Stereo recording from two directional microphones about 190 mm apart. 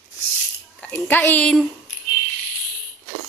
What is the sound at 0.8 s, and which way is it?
Speech, 5° left (ahead or behind).